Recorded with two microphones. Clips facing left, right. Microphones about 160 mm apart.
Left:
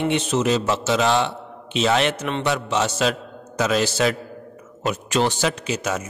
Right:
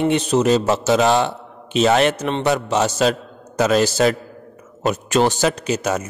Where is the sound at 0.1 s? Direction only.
40° right (ahead or behind).